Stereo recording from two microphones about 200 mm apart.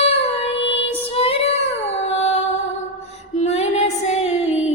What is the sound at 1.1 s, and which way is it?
Child singing, 30° left (ahead or behind).